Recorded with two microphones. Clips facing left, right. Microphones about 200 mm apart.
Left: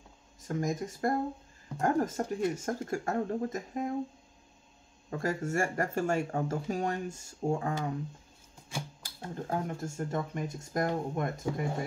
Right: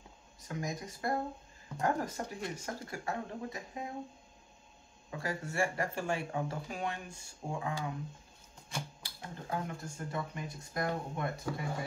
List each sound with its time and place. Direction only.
0.4 s speech: 45° left (ahead or behind)
5.1 s speech: 45° left (ahead or behind)
9.0 s speech: 45° left (ahead or behind)
11.4 s speech: 25° left (ahead or behind)